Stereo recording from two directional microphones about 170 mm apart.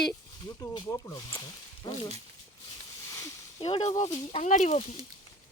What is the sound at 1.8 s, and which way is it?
Speech, 25° left (ahead or behind).